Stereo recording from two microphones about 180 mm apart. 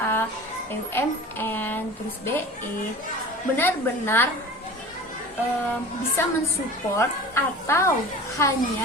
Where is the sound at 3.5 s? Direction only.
10° left (ahead or behind).